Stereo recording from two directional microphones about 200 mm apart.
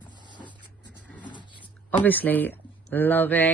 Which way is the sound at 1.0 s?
5° left (ahead or behind).